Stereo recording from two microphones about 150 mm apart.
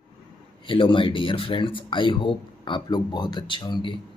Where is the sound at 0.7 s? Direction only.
35° left (ahead or behind).